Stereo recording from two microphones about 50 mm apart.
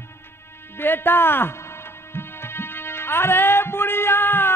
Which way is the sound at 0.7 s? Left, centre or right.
Left.